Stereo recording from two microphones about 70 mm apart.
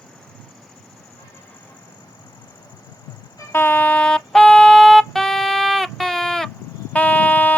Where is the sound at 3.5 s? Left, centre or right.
Left; by 6.5 s centre.